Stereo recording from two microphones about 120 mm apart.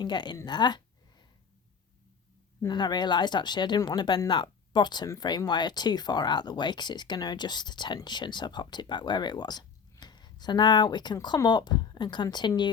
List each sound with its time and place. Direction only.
0.0 s speech: 40° left (ahead or behind)
0.3 s a sound: 35° left (ahead or behind)
2.6 s speech: 35° left (ahead or behind)